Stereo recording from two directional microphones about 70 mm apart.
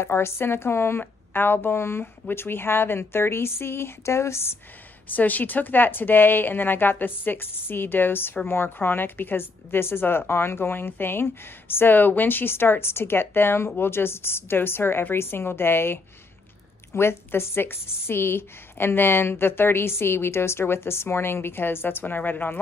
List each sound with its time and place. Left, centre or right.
0.0 s speech: left
5.0 s a woman's voice: left